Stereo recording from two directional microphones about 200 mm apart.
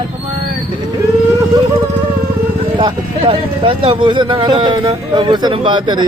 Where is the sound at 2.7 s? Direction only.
25° right (ahead or behind).